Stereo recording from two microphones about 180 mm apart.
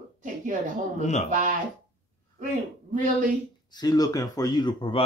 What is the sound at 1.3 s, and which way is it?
Speech, 45° right (ahead or behind).